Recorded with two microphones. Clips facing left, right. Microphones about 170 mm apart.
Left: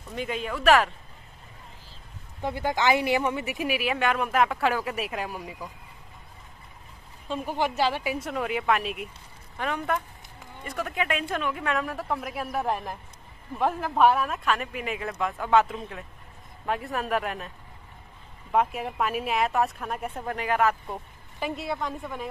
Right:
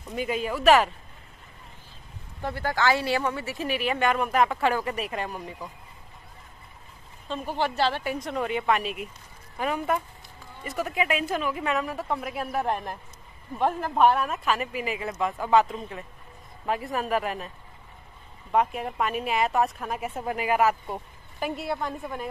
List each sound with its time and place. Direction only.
0.1 s speech: 5° right (ahead or behind)
2.4 s speech: 15° left (ahead or behind)
7.2 s speech: 10° left (ahead or behind)
18.5 s speech: centre (ahead or behind)